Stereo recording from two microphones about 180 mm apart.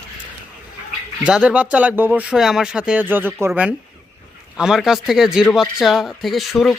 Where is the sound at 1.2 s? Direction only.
5° right (ahead or behind).